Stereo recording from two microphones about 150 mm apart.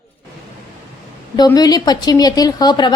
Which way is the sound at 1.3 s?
25° left (ahead or behind).